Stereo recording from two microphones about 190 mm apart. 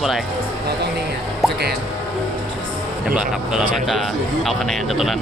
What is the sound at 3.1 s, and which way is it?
Speech, 5° right (ahead or behind).